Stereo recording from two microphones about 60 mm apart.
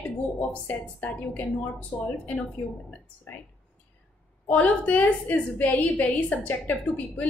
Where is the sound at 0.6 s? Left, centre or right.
Left.